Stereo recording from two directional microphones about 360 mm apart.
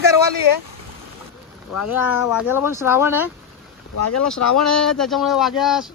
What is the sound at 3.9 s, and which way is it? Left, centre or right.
Speech, left.